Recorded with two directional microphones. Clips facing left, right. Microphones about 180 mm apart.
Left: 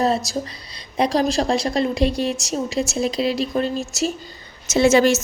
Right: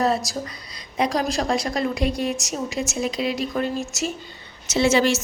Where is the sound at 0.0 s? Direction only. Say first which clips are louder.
Left 2 dB; 25° left (ahead or behind).